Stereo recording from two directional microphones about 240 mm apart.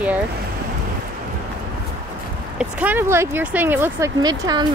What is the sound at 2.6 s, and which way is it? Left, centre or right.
Speech, centre.